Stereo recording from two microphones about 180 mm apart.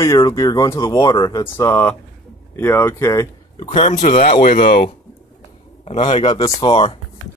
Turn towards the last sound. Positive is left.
turn(degrees=30)  # may be behind; listen again after turning